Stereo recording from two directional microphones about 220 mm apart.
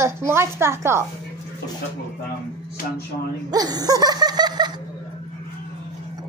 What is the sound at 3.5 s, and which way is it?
Laughter, 15° right (ahead or behind).